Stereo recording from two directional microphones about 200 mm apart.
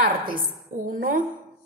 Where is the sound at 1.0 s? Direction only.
45° right (ahead or behind).